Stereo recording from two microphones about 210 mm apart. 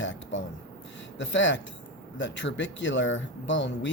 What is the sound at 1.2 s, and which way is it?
Speech, 60° left (ahead or behind).